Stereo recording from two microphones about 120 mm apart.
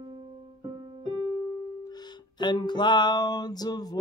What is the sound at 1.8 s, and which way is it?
Music, 35° left (ahead or behind).